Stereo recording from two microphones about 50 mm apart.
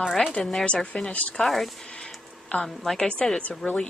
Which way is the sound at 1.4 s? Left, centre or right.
Centre.